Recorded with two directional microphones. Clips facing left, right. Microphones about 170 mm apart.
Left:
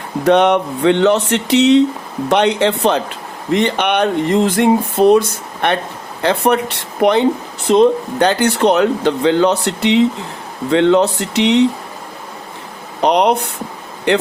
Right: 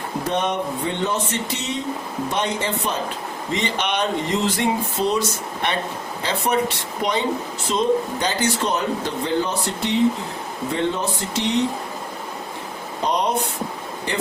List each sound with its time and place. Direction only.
0.3 s speech: 75° left (ahead or behind)
3.5 s a sound: 60° left (ahead or behind)
7.7 s speech: 65° left (ahead or behind)
13.0 s speech: 70° left (ahead or behind)